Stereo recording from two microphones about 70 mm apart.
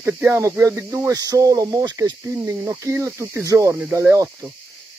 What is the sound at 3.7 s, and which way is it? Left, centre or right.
Speech, centre.